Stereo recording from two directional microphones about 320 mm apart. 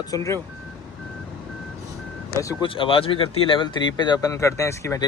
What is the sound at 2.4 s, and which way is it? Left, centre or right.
Speech, centre.